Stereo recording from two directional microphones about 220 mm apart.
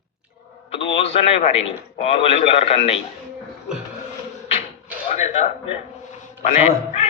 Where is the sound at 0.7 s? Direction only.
25° left (ahead or behind).